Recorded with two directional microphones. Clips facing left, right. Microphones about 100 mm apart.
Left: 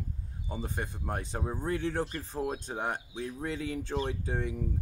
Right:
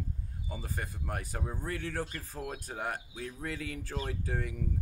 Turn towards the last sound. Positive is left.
turn(degrees=25)  # may be behind; listen again after turning